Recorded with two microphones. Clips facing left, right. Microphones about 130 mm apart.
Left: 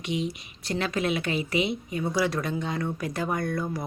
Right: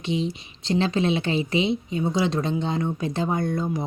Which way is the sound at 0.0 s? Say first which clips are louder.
Right 3 dB; 30° right (ahead or behind).